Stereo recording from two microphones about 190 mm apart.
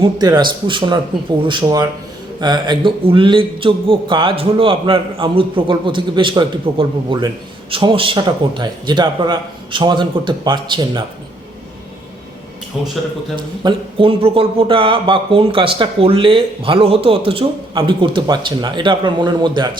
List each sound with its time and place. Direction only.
0.0 s a man's voice: 20° right (ahead or behind)
13.3 s a man's voice: 25° right (ahead or behind)